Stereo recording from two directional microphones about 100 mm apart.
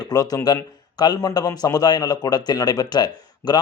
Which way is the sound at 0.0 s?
40° left (ahead or behind).